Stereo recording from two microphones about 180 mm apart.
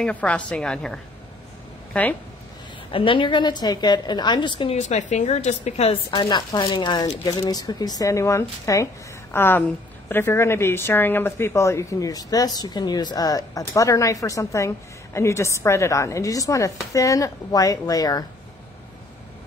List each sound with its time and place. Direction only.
0.0 s a woman's voice: 5° left (ahead or behind)
2.9 s speech: 30° left (ahead or behind)
4.7 s speech: 40° left (ahead or behind)
6.0 s a woman's voice: 20° left (ahead or behind)